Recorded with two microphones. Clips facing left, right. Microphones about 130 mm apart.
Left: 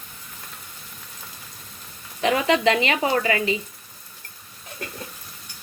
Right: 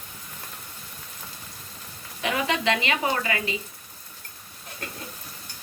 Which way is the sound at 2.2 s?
35° left (ahead or behind).